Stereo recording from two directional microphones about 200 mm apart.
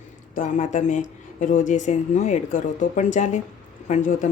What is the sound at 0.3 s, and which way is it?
A woman's voice, 40° left (ahead or behind).